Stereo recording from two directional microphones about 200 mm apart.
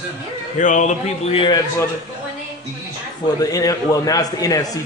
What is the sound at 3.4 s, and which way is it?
A man's voice, 20° left (ahead or behind).